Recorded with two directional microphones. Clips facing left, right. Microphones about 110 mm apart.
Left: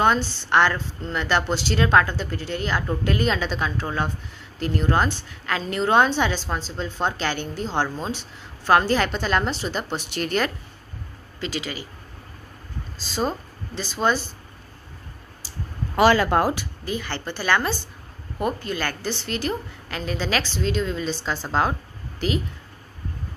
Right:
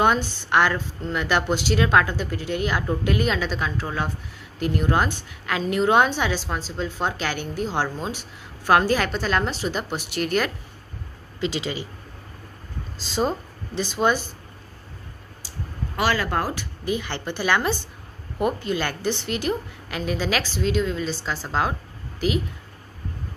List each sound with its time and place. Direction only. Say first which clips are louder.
0.0 s a woman's voice: even; 10° right (ahead or behind)
11.4 s speech: right 3 dB; 25° right (ahead or behind)
13.0 s speech: right 2 dB; 20° right (ahead or behind)
16.0 s speech: left 6 dB; 30° left (ahead or behind)
16.8 s a woman's voice: right 3 dB; 15° right (ahead or behind)